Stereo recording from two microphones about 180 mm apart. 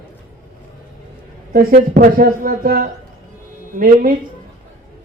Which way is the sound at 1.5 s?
55° right (ahead or behind).